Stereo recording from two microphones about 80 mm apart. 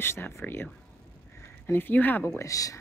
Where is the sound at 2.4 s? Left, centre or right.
Left.